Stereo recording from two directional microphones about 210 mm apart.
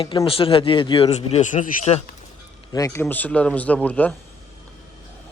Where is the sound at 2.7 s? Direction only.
15° left (ahead or behind).